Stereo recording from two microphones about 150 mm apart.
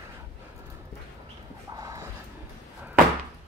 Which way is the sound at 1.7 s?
20° right (ahead or behind).